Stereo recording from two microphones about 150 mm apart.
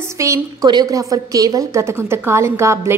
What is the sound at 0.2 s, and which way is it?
A woman's voice, 20° right (ahead or behind).